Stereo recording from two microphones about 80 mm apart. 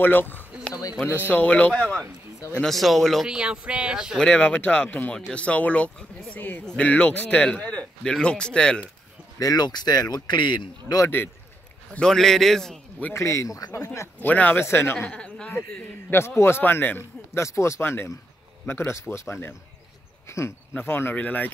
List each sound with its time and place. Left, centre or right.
0.0 s a sound: left
1.0 s a man's voice: left
2.6 s a man's voice: centre
3.3 s speech: centre
4.2 s a man's voice: centre
9.4 s speech: left
11.9 s a man's voice: centre
13.1 s speech: left
13.8 s a man's voice: left
15.0 s a man's voice: centre